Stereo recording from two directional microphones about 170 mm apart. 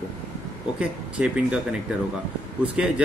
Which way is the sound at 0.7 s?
5° right (ahead or behind).